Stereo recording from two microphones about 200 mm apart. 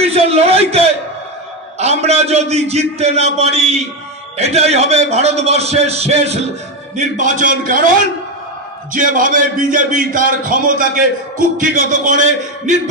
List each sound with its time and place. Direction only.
0.0 s a man's voice: 30° right (ahead or behind)